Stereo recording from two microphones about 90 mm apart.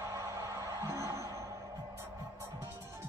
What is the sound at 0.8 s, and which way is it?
Music, 35° right (ahead or behind).